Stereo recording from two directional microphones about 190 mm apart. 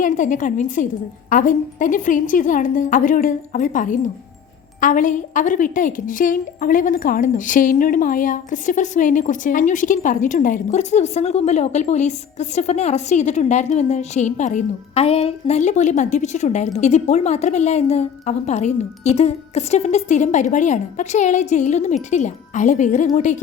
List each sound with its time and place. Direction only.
0.0 s a woman's voice: 40° left (ahead or behind)